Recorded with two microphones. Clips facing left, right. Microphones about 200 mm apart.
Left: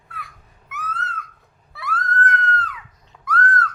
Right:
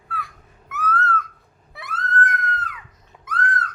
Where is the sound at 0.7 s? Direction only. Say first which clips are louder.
Right 8 dB; 15° left (ahead or behind).